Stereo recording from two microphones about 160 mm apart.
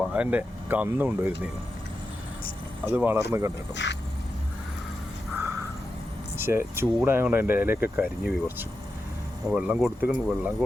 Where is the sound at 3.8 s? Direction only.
90° left.